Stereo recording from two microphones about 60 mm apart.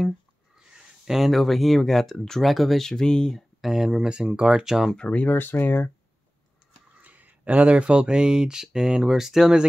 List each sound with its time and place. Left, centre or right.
0.6 s speech: centre
3.6 s speech: centre
4.9 s speech: left
5.3 s speech: left
7.0 s speech: right; by 9.7 s centre